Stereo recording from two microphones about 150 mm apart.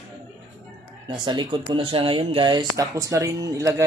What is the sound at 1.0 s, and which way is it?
Speech, 30° right (ahead or behind).